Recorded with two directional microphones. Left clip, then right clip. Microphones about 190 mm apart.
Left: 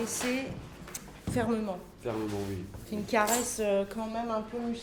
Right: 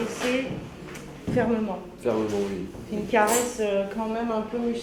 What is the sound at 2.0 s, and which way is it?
Speech, 30° left (ahead or behind).